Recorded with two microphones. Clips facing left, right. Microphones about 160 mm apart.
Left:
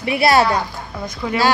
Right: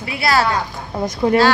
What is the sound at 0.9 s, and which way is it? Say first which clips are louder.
Speech: right 9 dB; 40° right (ahead or behind).